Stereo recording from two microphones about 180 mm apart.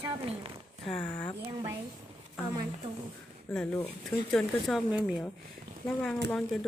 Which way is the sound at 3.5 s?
5° left (ahead or behind).